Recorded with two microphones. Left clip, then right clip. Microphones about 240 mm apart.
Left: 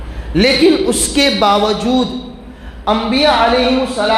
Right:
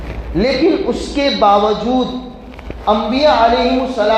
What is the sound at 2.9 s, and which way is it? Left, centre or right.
Speech, left.